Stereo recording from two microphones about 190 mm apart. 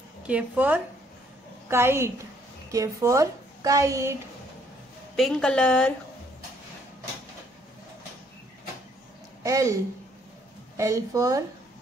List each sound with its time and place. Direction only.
0.2 s a woman's voice: 5° right (ahead or behind)
5.1 s a woman's voice: centre (ahead or behind)
9.4 s speech: 15° right (ahead or behind)
10.8 s a woman's voice: 15° right (ahead or behind)